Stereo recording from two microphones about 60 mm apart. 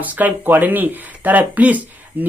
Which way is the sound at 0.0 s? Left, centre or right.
Right.